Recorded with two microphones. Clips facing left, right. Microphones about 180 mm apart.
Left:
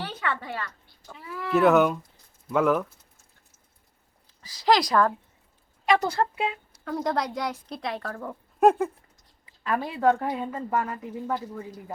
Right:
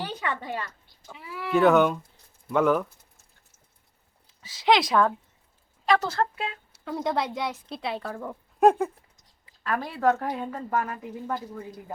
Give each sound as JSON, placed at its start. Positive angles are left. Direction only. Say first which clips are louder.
{"t": 0.0, "sound": "a sound", "louder": "even", "side_deg": -15}
{"t": 1.0, "sound": "a woman's voice", "louder": "left 1 dB", "side_deg": -5}
{"t": 4.3, "sound": "speech", "louder": "even", "side_deg": 0}
{"t": 6.7, "sound": "a woman's voice", "louder": "right 1 dB", "side_deg": -5}
{"t": 10.0, "sound": "a woman's voice", "louder": "left 1 dB", "side_deg": -5}